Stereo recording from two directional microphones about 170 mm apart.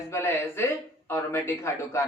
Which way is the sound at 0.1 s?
15° left (ahead or behind).